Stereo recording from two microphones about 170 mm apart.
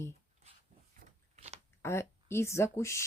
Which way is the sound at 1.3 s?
40° right (ahead or behind).